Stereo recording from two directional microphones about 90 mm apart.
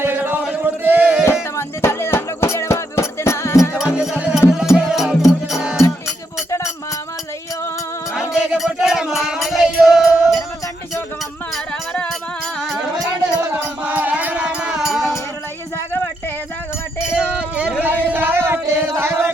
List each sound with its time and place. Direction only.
0.0 s chant: 25° right (ahead or behind)
1.2 s music: 30° left (ahead or behind)
3.9 s music: 15° right (ahead or behind)
8.3 s music: 5° right (ahead or behind)
12.5 s music: centre (ahead or behind)
13.4 s music: 15° right (ahead or behind)
17.3 s music: 10° right (ahead or behind)
17.8 s a sound: 20° right (ahead or behind)
18.8 s chant: 25° right (ahead or behind)